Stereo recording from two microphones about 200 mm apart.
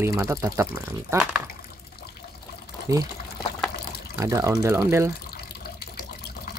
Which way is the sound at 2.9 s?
15° right (ahead or behind).